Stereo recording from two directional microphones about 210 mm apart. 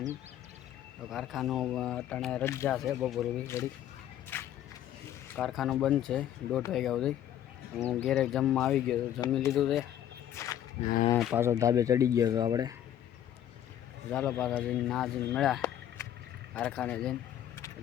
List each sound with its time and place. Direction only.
1.1 s speech: centre (ahead or behind)
2.6 s speech: centre (ahead or behind)
3.4 s speech: 15° left (ahead or behind)
4.3 s a sound: 10° left (ahead or behind)
5.3 s speech: centre (ahead or behind)
10.3 s a sound: 15° left (ahead or behind)
11.2 s speech: 5° right (ahead or behind)
14.1 s speech: 5° left (ahead or behind)